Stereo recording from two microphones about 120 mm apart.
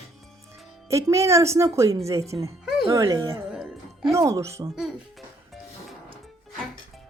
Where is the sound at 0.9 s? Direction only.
25° right (ahead or behind).